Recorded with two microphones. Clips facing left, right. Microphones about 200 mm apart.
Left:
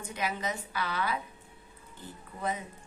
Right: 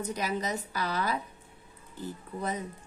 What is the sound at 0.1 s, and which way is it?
Speech, 40° right (ahead or behind).